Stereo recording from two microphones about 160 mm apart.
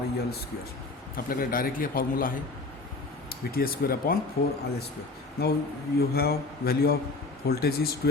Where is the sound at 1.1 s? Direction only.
65° left (ahead or behind).